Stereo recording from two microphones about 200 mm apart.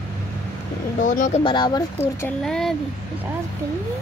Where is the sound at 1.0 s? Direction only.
40° left (ahead or behind).